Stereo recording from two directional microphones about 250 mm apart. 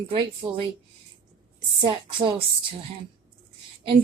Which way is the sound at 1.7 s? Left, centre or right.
Right.